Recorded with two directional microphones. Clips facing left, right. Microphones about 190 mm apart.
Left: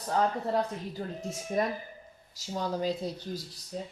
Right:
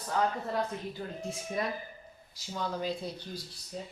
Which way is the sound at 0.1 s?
35° left (ahead or behind).